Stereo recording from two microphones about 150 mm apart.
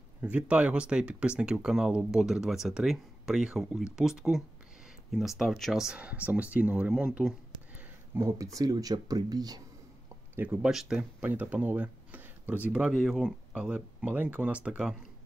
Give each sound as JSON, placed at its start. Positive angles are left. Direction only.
{"t": 0.2, "sound": "speech", "side_deg": -10}
{"t": 8.2, "sound": "speech", "side_deg": -20}
{"t": 10.3, "sound": "speech", "side_deg": -10}